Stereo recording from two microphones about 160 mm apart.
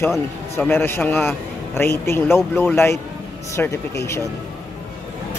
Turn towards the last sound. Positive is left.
turn(degrees=15)  # may be behind; listen again after turning